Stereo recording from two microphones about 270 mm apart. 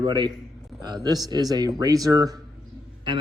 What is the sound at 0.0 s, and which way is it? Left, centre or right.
A man's voice, centre.